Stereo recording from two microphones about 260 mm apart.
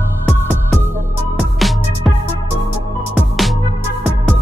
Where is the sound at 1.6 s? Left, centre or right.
Centre.